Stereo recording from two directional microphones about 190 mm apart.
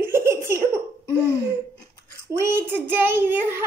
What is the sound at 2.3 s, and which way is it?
A child's voice, 10° right (ahead or behind).